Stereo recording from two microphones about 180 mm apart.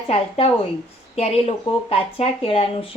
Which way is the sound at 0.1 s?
30° left (ahead or behind).